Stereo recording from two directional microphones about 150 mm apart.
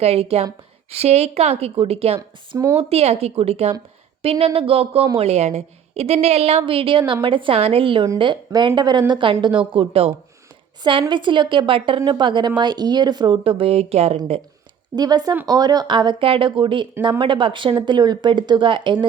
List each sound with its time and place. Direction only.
0.0 s a woman's voice: 40° right (ahead or behind)
11.1 s a woman's voice: 30° right (ahead or behind)
14.9 s a woman's voice: 25° right (ahead or behind)